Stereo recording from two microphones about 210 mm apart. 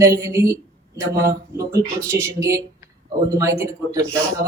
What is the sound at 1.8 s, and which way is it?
Speech, 5° left (ahead or behind).